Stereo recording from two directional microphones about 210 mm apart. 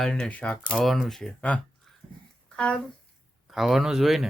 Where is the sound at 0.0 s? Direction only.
Centre (ahead or behind).